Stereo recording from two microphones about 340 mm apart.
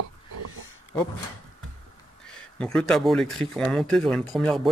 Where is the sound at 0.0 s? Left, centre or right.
Right.